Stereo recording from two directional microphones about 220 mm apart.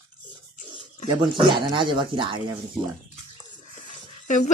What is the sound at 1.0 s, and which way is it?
Speech, 20° right (ahead or behind).